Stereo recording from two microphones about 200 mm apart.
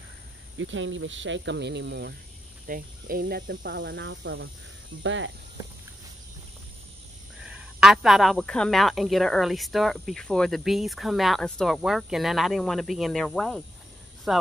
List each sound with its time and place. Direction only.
0.6 s speech: 70° right (ahead or behind)
2.6 s speech: 45° right (ahead or behind); by 5.3 s 70° right (ahead or behind)
7.4 s speech: 5° right (ahead or behind)